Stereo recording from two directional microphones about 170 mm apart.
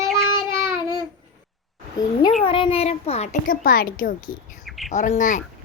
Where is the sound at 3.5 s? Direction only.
55° left (ahead or behind).